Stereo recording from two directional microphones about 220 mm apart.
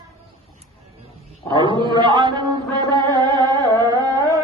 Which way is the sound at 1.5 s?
20° right (ahead or behind).